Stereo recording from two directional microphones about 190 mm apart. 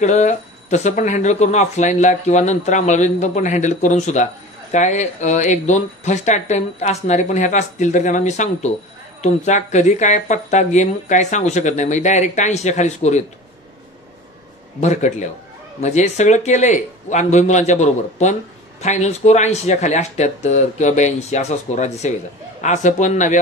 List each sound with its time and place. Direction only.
0.0 s speech: 35° left (ahead or behind)
14.8 s speech: 35° left (ahead or behind)